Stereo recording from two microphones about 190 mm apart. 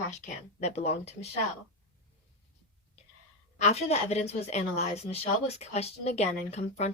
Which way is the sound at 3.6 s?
35° left (ahead or behind).